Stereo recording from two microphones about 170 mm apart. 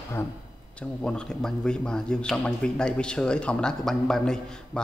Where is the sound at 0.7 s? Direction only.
5° left (ahead or behind).